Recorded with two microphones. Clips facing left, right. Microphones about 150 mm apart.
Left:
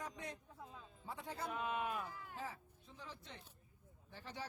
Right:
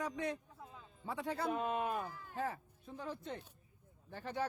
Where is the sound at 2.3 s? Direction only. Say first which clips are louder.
Right 8 dB; 60° right (ahead or behind).